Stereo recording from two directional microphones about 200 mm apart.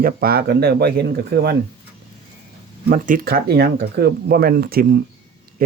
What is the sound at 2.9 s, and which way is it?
Speech, 45° right (ahead or behind).